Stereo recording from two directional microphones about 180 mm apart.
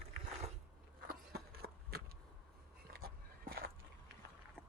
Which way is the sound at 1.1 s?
60° right (ahead or behind).